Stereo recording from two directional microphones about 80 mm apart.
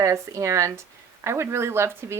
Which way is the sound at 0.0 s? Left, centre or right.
Right.